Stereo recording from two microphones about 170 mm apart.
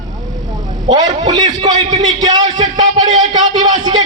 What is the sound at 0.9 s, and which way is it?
A man's voice, 25° right (ahead or behind).